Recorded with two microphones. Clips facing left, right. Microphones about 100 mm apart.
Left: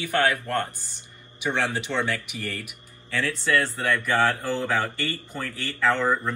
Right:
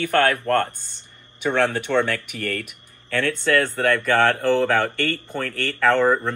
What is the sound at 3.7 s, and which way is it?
Speech, 65° right (ahead or behind).